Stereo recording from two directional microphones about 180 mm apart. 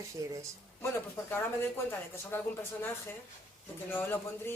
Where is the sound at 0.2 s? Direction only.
20° right (ahead or behind).